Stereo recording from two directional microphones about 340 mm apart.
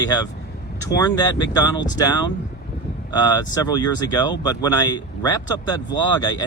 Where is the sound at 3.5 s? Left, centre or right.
Centre.